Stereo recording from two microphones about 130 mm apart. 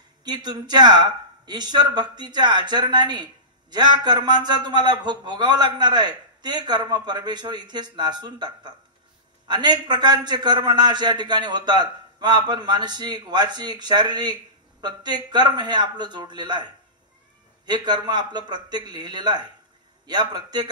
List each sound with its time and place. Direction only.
0.2 s a man's voice: 35° right (ahead or behind)